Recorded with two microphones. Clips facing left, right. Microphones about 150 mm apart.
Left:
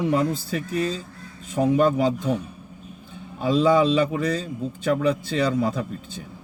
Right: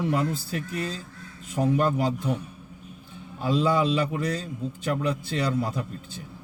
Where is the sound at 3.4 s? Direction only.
75° left (ahead or behind).